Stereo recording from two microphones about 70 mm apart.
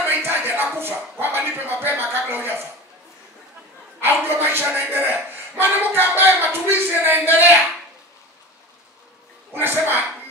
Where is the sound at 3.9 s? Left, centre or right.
Right.